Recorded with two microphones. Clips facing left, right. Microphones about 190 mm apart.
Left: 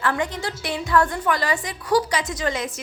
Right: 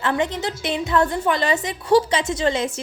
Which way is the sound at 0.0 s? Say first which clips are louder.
Right 2 dB; 20° right (ahead or behind).